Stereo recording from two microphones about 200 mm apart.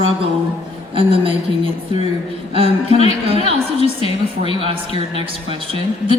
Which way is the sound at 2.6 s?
30° left (ahead or behind).